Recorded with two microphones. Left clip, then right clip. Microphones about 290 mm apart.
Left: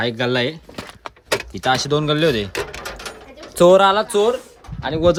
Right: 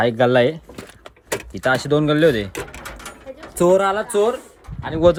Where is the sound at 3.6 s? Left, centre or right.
Centre.